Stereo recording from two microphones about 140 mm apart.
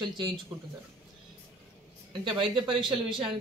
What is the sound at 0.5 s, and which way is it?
Speech, 10° right (ahead or behind).